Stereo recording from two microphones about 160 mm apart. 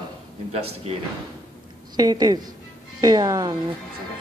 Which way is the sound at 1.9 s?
25° right (ahead or behind).